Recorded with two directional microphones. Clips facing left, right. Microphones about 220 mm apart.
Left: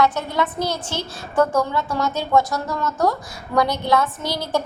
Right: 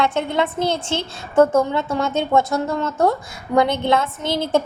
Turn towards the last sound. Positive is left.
turn(degrees=-25)  # may be behind; listen again after turning